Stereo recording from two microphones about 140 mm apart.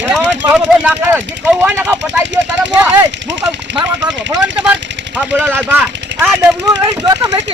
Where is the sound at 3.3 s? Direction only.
30° right (ahead or behind).